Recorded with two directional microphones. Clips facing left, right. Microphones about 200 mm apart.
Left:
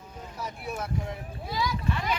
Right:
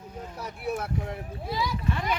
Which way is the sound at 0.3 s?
60° right (ahead or behind).